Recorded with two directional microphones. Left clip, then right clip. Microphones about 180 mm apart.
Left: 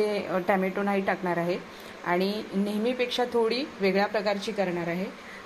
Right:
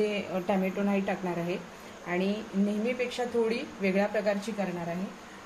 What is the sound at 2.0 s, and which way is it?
Speech, 35° left (ahead or behind).